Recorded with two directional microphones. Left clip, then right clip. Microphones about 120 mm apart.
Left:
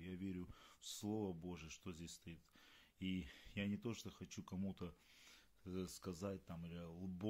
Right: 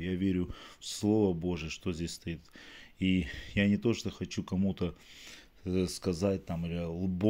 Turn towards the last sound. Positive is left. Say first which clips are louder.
# right 18 dB
turn(degrees=-25)  # may be behind; listen again after turning